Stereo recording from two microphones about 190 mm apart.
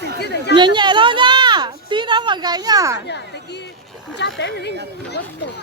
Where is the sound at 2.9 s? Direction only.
65° left (ahead or behind).